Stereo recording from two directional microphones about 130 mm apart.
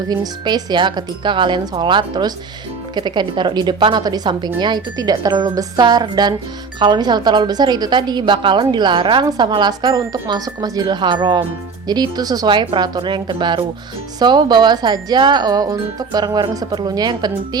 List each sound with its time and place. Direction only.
0.1 s speech: 30° right (ahead or behind)